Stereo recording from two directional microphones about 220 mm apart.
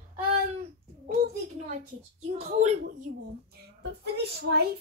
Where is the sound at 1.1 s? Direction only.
35° right (ahead or behind).